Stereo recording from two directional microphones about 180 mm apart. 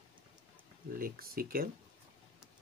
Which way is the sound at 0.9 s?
55° right (ahead or behind).